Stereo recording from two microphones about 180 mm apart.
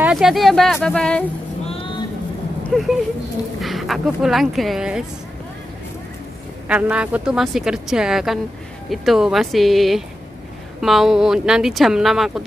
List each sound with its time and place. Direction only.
0.0 s speech: centre (ahead or behind)
1.7 s vehicle: 30° left (ahead or behind)
2.7 s speech: centre (ahead or behind)
6.7 s speech: 5° right (ahead or behind)